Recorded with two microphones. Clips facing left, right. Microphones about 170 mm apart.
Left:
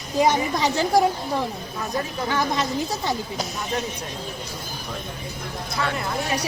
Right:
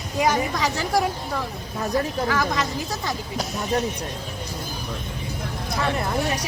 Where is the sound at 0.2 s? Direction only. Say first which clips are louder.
Left 2 dB; 30° left (ahead or behind).